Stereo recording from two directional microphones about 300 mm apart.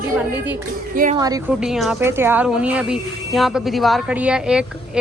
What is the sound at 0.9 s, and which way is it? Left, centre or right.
Speech, right.